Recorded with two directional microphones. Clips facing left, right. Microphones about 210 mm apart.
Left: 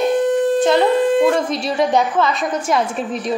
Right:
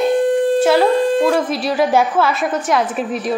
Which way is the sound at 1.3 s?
5° right (ahead or behind).